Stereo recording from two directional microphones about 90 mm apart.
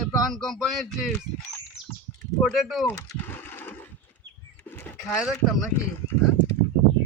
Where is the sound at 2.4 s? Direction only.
Centre (ahead or behind).